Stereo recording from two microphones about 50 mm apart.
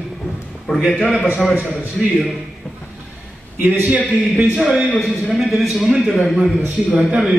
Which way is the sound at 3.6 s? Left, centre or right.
Right.